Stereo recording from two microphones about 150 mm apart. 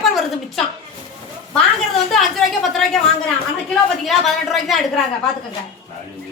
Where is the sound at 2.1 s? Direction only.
Centre (ahead or behind).